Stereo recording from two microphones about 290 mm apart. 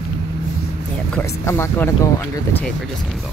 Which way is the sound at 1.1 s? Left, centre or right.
Centre.